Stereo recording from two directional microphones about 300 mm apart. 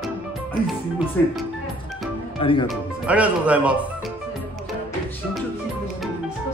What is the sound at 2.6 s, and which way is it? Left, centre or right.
Speech, centre.